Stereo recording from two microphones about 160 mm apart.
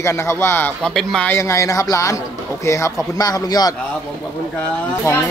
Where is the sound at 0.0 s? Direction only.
15° left (ahead or behind).